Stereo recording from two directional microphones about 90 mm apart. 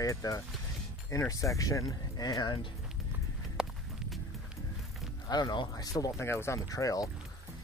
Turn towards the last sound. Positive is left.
turn(degrees=40)  # may be behind; listen again after turning